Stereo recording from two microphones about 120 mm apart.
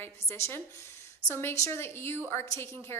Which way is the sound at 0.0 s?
20° left (ahead or behind).